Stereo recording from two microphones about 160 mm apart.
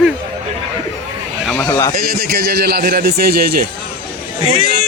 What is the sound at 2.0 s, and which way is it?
A man's voice, 80° right.